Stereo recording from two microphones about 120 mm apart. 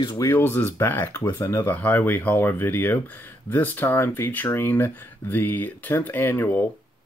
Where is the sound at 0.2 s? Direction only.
20° left (ahead or behind).